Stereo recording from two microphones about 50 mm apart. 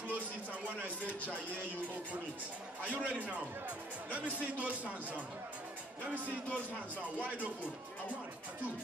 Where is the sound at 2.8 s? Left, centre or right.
Left.